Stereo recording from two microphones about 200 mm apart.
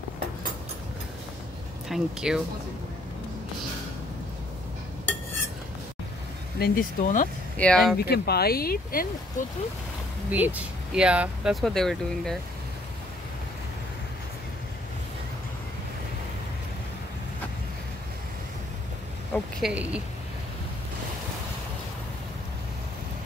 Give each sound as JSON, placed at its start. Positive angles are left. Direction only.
{"t": 1.9, "sound": "speech", "side_deg": -5}
{"t": 6.6, "sound": "speech", "side_deg": 45}
{"t": 7.5, "sound": "speech", "side_deg": 5}
{"t": 8.0, "sound": "speech", "side_deg": 55}
{"t": 10.3, "sound": "speech", "side_deg": -10}
{"t": 19.3, "sound": "speech", "side_deg": -5}